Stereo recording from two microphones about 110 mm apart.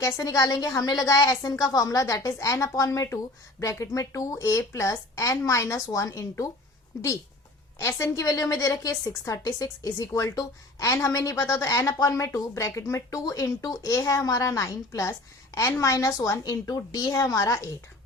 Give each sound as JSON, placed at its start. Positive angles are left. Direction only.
{"t": 0.0, "sound": "a woman's voice", "side_deg": 30}
{"t": 7.8, "sound": "a woman's voice", "side_deg": 25}